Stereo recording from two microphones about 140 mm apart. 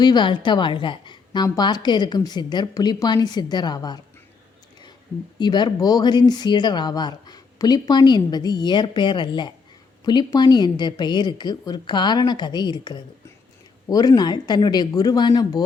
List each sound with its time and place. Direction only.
0.0 s speech: 30° left (ahead or behind)
5.4 s speech: 30° left (ahead or behind)